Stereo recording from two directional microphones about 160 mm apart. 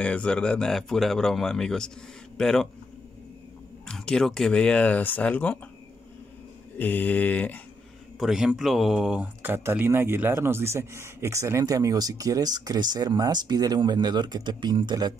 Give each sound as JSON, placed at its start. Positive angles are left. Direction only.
{"t": 0.0, "sound": "speech", "side_deg": 5}
{"t": 3.8, "sound": "speech", "side_deg": 5}
{"t": 6.8, "sound": "speech", "side_deg": 10}
{"t": 8.2, "sound": "speech", "side_deg": -5}